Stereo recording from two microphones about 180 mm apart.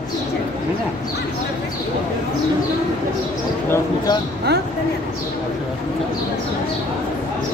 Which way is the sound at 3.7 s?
20° left (ahead or behind).